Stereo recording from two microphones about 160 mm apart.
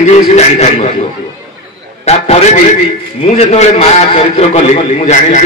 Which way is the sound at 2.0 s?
45° left (ahead or behind).